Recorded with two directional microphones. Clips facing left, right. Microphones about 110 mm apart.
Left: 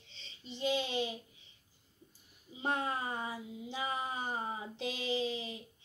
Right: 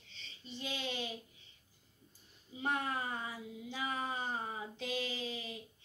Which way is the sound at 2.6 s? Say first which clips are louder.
Left 2 dB; 25° left (ahead or behind).